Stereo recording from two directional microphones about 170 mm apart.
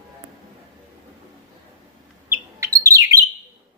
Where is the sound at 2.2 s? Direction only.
15° right (ahead or behind).